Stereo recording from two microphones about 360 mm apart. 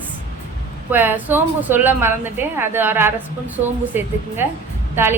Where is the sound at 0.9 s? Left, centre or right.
Centre.